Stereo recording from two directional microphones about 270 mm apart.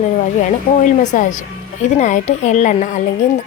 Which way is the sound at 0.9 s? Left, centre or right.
Left.